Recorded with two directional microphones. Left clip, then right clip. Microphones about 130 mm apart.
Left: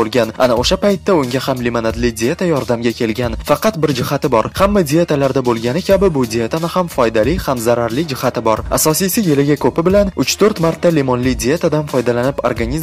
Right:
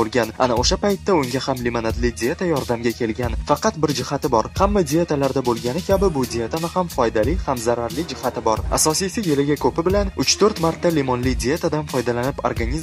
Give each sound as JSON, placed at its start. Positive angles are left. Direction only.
{"t": 0.0, "sound": "speech", "side_deg": 30}